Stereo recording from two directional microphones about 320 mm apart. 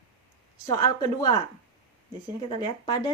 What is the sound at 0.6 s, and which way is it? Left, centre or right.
Speech, centre.